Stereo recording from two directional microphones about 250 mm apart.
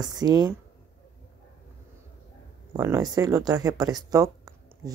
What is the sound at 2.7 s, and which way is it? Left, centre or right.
Speech, centre.